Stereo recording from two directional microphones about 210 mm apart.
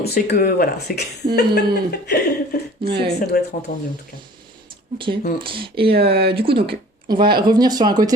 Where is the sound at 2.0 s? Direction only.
50° left (ahead or behind).